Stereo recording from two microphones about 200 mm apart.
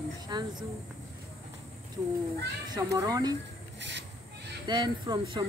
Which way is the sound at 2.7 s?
15° right (ahead or behind).